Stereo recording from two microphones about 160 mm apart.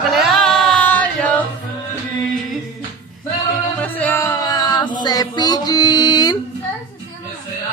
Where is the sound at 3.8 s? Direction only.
10° left (ahead or behind).